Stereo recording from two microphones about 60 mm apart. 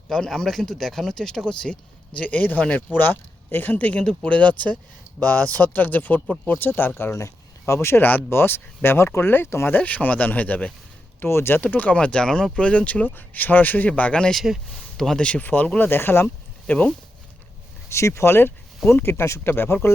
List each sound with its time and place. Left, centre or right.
0.1 s speech: centre; by 8.0 s left
8.0 s speech: left
9.7 s speech: left
11.2 s speech: left
11.6 s speech: left
14.3 s speech: centre
14.9 s speech: centre
15.4 s speech: left
15.9 s speech: left
16.6 s speech: left
17.8 s speech: left